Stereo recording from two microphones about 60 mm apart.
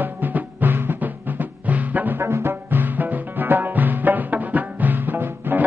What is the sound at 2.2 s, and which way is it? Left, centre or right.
Music, right.